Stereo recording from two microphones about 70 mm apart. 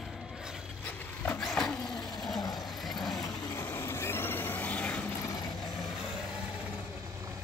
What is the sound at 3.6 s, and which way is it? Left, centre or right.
Vehicle, left.